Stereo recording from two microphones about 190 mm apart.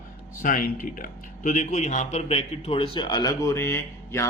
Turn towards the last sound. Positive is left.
turn(degrees=15)  # may be behind; listen again after turning